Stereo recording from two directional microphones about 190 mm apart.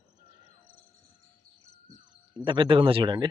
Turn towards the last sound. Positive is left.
turn(degrees=-25)  # may be behind; listen again after turning